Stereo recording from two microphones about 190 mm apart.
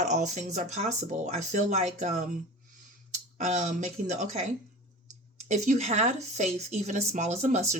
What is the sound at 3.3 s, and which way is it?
Speech, 40° right (ahead or behind).